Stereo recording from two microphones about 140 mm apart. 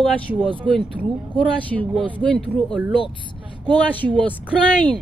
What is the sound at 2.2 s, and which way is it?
Speech, 5° left (ahead or behind).